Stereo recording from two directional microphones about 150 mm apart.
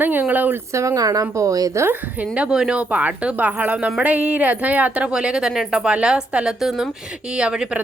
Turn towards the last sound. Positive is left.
turn(degrees=-5)  # may be behind; listen again after turning